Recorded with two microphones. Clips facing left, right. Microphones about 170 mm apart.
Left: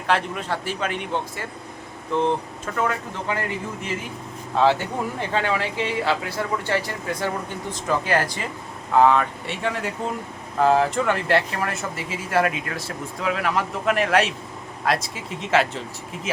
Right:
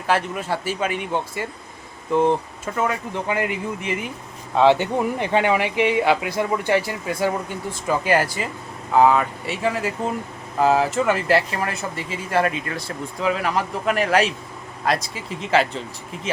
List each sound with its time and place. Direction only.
0.1 s speech: 5° right (ahead or behind)
2.7 s speech: 15° right (ahead or behind)